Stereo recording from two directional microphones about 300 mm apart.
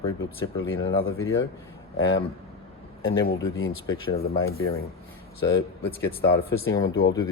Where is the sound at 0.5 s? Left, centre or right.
Left.